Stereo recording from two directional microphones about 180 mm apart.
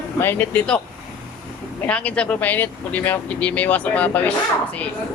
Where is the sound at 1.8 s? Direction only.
5° left (ahead or behind).